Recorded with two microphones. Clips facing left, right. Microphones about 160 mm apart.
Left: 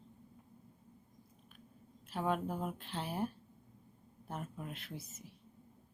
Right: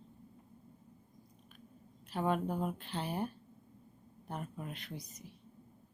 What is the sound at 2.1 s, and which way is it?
Speech, centre (ahead or behind).